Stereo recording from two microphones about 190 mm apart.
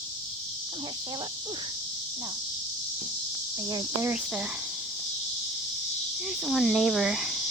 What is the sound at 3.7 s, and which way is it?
Speech, 20° right (ahead or behind).